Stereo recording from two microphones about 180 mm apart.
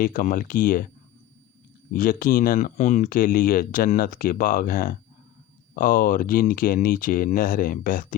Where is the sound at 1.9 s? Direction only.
50° left (ahead or behind).